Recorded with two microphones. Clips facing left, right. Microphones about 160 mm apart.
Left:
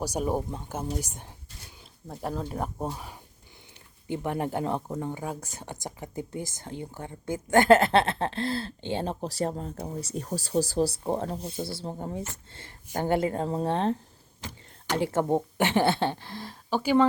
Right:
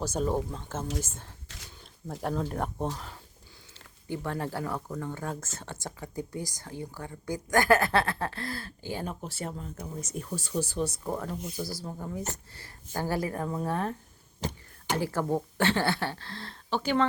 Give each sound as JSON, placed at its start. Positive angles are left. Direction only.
{"t": 0.0, "sound": "a woman's voice", "side_deg": 10}
{"t": 1.5, "sound": "speech", "side_deg": -90}
{"t": 2.2, "sound": "a woman's voice", "side_deg": 5}
{"t": 5.1, "sound": "speech", "side_deg": 15}
{"t": 14.9, "sound": "a woman's voice", "side_deg": 25}